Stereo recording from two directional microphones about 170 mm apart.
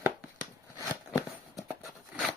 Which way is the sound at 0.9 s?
20° left (ahead or behind).